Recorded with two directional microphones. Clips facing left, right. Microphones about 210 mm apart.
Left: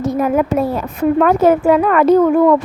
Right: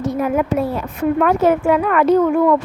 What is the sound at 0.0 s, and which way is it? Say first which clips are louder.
A woman's voice: left 3 dB; 40° left (ahead or behind).